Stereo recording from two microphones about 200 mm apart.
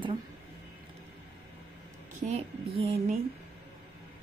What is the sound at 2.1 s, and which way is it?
A woman's voice, 30° right (ahead or behind).